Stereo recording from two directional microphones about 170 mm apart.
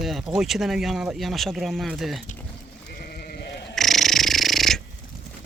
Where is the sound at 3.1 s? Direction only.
65° left (ahead or behind).